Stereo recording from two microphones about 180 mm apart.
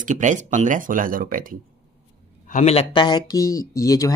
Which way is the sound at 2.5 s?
40° left (ahead or behind).